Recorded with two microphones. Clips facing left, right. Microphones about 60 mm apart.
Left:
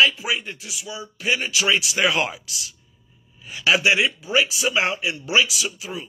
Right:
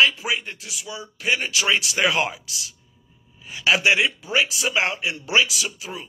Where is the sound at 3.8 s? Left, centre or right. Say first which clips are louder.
Right 1 dB; right.